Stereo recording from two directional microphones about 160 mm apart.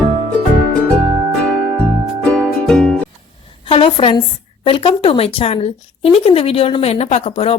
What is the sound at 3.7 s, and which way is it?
A woman's voice, 35° left (ahead or behind).